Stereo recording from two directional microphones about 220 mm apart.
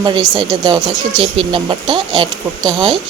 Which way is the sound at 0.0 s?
20° right (ahead or behind).